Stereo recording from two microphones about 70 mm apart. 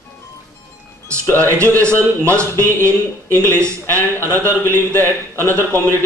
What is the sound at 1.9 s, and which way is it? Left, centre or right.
Speech, right.